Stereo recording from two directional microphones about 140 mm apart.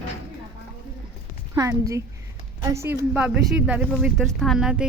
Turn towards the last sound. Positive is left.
turn(degrees=-5)  # may be behind; listen again after turning